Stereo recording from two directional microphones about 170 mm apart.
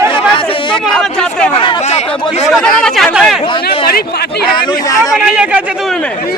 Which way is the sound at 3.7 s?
65° left (ahead or behind).